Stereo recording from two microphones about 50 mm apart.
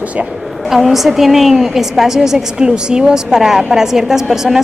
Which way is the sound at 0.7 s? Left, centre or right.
Centre.